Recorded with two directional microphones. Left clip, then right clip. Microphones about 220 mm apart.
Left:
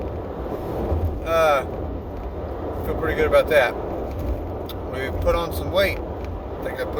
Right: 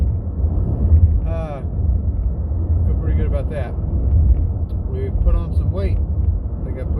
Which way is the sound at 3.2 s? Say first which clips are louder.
Left 13 dB; 10° left (ahead or behind).